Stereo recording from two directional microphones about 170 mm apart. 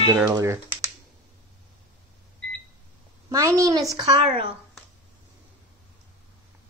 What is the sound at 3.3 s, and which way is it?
A woman's voice, 20° right (ahead or behind).